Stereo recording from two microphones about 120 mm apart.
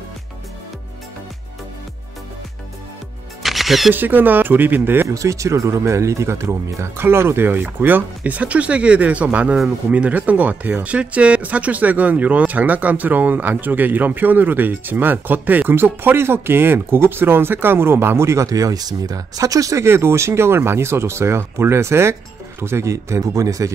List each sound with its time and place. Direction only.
3.4 s music: centre (ahead or behind)
3.9 s speech: 15° right (ahead or behind)